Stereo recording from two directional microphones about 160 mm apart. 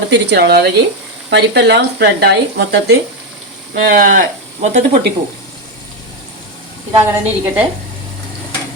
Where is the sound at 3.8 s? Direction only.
65° right (ahead or behind).